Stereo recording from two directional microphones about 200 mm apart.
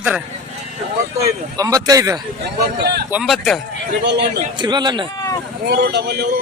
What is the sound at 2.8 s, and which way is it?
Speech, 55° right (ahead or behind).